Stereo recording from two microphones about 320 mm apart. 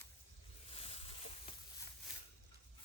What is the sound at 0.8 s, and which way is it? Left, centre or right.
Boat, centre.